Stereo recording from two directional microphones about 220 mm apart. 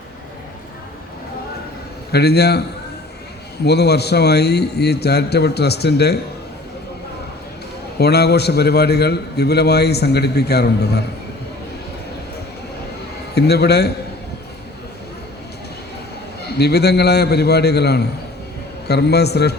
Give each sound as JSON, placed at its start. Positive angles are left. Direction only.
{"t": 2.1, "sound": "a man's voice", "side_deg": 45}
{"t": 7.9, "sound": "a man's voice", "side_deg": 45}
{"t": 13.3, "sound": "a man's voice", "side_deg": 45}
{"t": 16.6, "sound": "a man's voice", "side_deg": 50}